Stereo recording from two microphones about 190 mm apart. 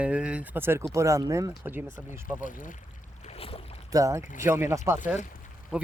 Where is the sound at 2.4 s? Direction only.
45° left (ahead or behind).